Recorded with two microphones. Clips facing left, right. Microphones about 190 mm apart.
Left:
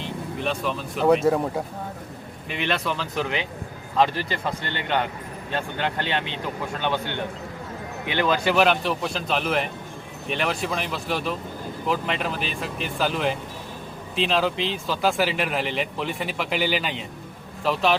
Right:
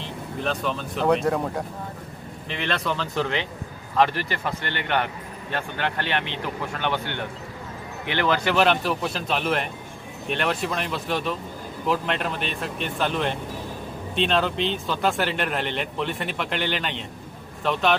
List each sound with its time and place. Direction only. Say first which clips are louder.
0.0 s speech: left 1 dB; centre (ahead or behind)
8.5 s speech: even; 5° left (ahead or behind)